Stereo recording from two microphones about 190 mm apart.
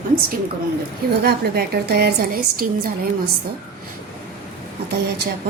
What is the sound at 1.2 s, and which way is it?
A woman's voice, 60° right (ahead or behind).